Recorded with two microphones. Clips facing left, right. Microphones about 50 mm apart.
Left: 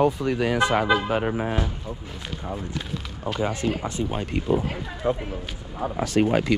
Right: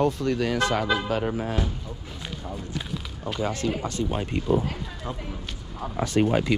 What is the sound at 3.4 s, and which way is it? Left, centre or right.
Speech, centre.